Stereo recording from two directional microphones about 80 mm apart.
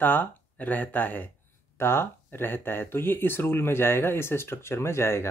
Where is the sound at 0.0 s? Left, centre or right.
Left.